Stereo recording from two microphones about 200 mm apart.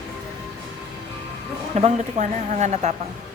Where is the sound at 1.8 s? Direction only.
35° right (ahead or behind).